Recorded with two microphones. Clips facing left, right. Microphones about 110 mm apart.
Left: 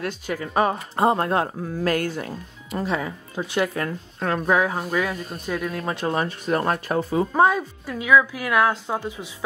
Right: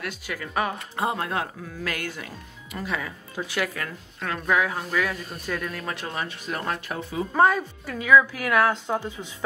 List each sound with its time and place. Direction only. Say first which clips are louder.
0.0 s speech: left 5 dB; 30° left (ahead or behind)
7.3 s a woman's voice: even; 10° left (ahead or behind)